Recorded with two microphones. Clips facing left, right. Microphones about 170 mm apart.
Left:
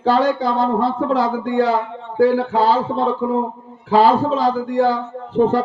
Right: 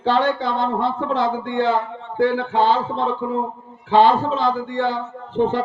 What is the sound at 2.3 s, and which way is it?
Speech, 35° left (ahead or behind).